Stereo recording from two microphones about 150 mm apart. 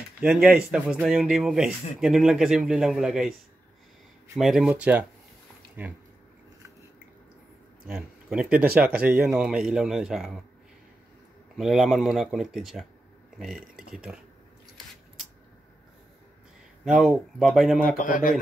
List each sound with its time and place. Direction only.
0.2 s speech: 5° right (ahead or behind)
4.4 s speech: 5° right (ahead or behind)
7.8 s speech: 5° right (ahead or behind)
11.5 s speech: centre (ahead or behind)
13.8 s speech: 5° right (ahead or behind)
16.8 s speech: centre (ahead or behind)
18.0 s a man's voice: 65° left (ahead or behind)